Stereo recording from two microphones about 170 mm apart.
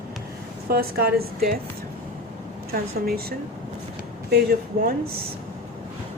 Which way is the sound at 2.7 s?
65° right (ahead or behind).